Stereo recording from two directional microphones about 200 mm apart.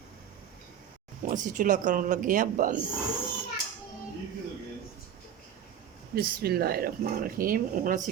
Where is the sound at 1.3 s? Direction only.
40° right (ahead or behind).